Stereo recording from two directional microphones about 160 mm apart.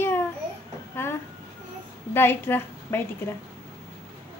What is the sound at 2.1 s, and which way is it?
Speech, 15° left (ahead or behind).